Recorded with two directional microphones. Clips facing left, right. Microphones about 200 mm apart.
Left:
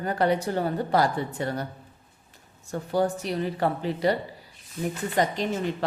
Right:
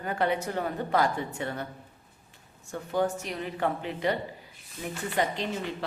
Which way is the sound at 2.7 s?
35° left (ahead or behind).